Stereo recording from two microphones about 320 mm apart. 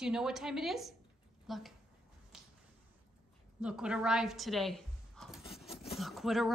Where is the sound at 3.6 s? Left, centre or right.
Centre.